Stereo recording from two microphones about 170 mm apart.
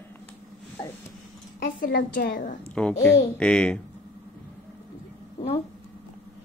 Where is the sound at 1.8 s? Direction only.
55° left (ahead or behind).